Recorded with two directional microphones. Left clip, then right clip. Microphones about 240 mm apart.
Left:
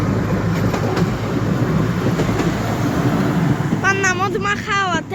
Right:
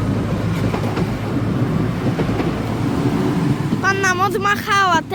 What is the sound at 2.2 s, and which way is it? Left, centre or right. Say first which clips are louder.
Train: even; left.